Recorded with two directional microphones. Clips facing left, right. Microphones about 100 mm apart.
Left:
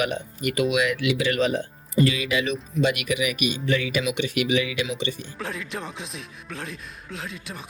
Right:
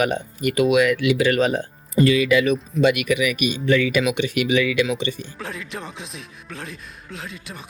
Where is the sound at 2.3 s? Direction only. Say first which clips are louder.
Right 6 dB; 85° right.